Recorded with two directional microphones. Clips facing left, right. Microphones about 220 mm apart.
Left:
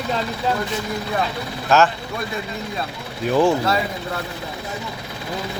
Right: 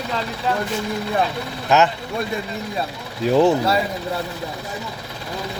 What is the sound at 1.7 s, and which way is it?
Speech, 15° right (ahead or behind).